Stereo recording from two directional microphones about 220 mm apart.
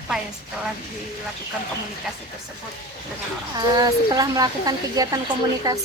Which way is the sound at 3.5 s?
15° right (ahead or behind).